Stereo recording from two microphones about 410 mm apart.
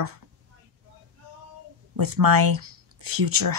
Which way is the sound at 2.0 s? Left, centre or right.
Right.